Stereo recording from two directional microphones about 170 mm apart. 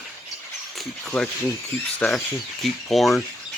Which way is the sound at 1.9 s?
5° left (ahead or behind).